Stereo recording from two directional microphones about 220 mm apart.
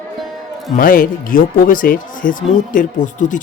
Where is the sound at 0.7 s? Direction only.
40° left (ahead or behind).